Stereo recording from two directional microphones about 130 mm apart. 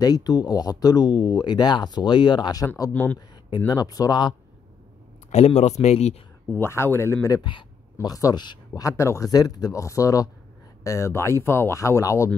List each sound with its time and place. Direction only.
0.0 s speech: 30° left (ahead or behind)
2.9 s speech: 15° left (ahead or behind)
3.2 s speech: 35° left (ahead or behind)
5.3 s speech: 60° left (ahead or behind)
6.5 s speech: 20° left (ahead or behind)
7.4 s speech: 35° left (ahead or behind)